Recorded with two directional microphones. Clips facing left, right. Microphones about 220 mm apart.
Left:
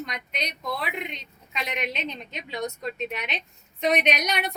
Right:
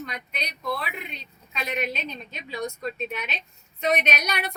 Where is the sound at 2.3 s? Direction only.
20° left (ahead or behind).